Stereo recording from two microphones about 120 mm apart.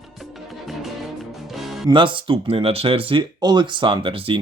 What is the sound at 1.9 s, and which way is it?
Speech, 45° right (ahead or behind).